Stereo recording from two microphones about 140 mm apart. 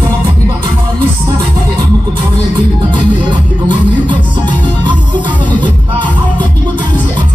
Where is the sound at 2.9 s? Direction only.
35° right (ahead or behind).